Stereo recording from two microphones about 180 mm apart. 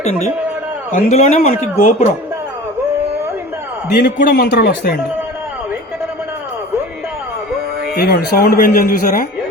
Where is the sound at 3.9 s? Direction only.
60° left (ahead or behind).